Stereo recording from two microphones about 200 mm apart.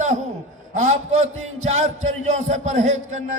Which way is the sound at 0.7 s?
40° right (ahead or behind).